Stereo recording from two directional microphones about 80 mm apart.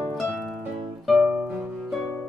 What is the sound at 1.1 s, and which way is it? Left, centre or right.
Music, centre.